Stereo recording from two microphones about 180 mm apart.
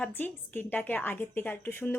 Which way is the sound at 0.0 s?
10° left (ahead or behind).